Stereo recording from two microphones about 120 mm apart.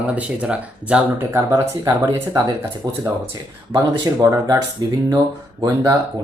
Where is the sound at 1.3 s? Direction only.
20° right (ahead or behind).